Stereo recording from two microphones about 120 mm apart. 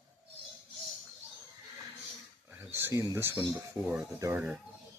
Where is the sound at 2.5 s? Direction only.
15° right (ahead or behind).